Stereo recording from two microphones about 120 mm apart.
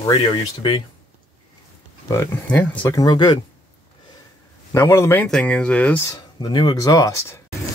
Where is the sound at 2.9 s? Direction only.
35° left (ahead or behind).